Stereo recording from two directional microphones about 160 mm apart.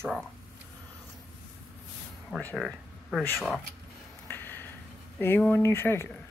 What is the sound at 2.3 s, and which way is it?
Speech, 10° left (ahead or behind).